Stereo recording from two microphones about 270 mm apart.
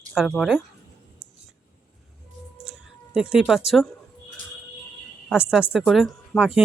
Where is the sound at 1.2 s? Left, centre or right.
Centre.